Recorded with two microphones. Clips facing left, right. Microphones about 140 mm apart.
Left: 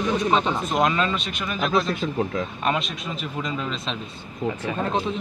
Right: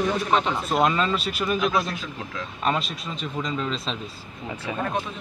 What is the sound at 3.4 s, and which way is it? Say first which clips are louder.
Speech: right 2 dB; 5° left (ahead or behind).